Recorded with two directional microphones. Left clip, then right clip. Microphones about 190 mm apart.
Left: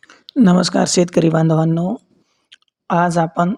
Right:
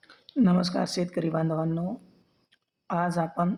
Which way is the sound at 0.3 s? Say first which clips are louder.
Left 11 dB; 40° left (ahead or behind).